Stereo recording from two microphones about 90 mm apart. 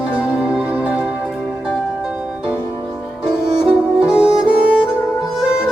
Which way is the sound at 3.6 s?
10° right (ahead or behind).